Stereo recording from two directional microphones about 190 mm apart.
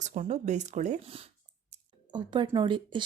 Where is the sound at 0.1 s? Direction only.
35° right (ahead or behind).